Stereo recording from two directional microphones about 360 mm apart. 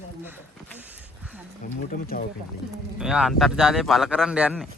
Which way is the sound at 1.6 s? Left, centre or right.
Left.